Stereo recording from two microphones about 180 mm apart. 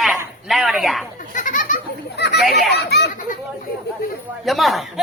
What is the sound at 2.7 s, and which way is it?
Children playing, 70° left (ahead or behind).